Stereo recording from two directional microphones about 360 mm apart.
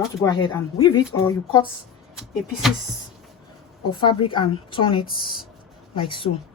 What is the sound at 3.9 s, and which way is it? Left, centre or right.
Speech, centre.